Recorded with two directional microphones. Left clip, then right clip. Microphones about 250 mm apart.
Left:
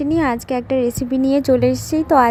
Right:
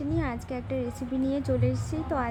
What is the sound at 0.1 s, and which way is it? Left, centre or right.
A woman's voice, left.